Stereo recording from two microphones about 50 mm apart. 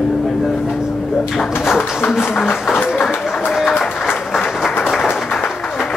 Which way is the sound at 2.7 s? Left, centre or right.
Left.